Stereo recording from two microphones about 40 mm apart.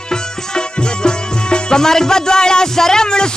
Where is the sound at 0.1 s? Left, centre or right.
Left.